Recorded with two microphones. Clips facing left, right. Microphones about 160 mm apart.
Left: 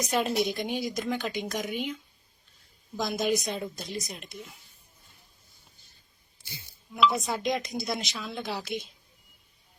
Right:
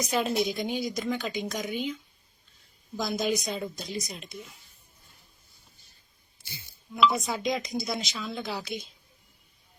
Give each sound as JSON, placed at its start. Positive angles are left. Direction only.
{"t": 0.0, "sound": "a woman's voice", "side_deg": 0}
{"t": 7.1, "sound": "a woman's voice", "side_deg": 0}